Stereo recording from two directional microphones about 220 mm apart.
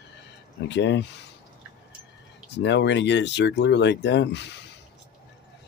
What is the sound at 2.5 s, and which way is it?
Speech, 50° left (ahead or behind).